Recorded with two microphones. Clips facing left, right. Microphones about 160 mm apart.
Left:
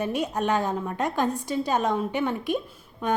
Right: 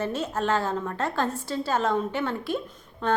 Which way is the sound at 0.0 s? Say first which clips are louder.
Left 1 dB; 15° left (ahead or behind).